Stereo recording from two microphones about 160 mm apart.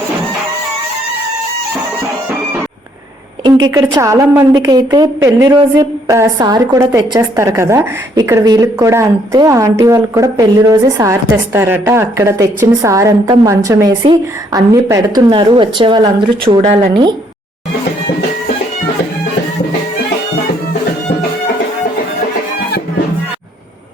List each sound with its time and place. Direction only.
3.4 s a woman's voice: 25° right (ahead or behind)
15.3 s a woman's voice: 30° right (ahead or behind)